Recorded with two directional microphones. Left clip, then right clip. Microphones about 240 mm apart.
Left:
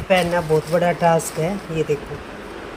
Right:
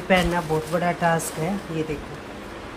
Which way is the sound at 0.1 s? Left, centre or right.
Centre.